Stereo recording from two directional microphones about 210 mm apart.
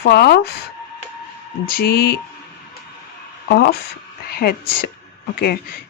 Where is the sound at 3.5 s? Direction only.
50° left (ahead or behind).